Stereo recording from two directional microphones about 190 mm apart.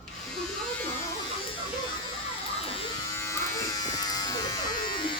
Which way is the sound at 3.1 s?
15° left (ahead or behind).